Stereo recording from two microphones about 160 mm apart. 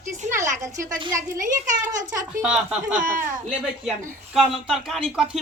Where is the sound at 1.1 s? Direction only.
55° right (ahead or behind).